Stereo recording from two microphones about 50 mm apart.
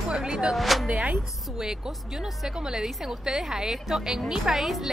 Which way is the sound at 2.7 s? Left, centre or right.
Centre.